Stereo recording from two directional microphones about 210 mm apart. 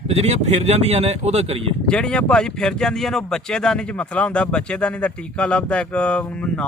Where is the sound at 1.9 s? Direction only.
5° left (ahead or behind).